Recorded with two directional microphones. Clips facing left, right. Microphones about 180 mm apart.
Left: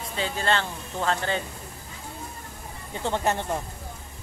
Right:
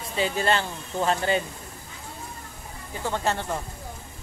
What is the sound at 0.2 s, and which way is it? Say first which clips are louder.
Speech: right 2 dB; 10° right (ahead or behind).